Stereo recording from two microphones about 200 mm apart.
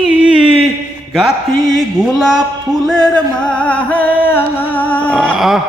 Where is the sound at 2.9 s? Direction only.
5° left (ahead or behind).